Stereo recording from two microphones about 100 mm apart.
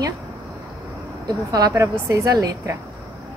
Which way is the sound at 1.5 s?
35° right (ahead or behind).